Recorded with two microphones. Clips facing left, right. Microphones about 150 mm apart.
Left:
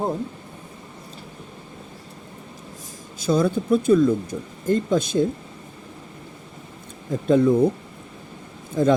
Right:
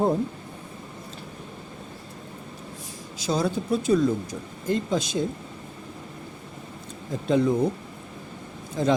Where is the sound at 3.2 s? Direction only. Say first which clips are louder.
Left 5 dB; 50° left (ahead or behind).